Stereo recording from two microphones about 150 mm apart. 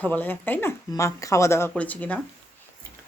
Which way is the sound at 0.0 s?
10° left (ahead or behind).